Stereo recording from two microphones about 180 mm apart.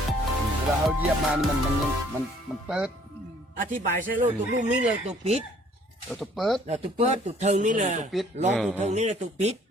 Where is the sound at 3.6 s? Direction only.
45° right (ahead or behind).